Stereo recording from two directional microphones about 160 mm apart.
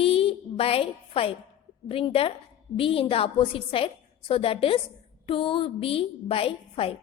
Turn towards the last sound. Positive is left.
turn(degrees=35)  # may be behind; listen again after turning